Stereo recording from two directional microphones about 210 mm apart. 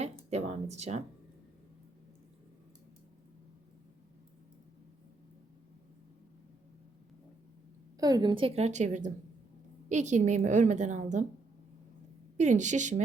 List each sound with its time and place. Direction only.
0.0 s speech: 30° right (ahead or behind)
7.9 s a woman's voice: 20° right (ahead or behind); by 11.3 s 35° right (ahead or behind)
12.4 s a woman's voice: 35° right (ahead or behind)